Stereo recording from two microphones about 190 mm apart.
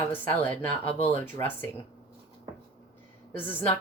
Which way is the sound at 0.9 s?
30° left (ahead or behind).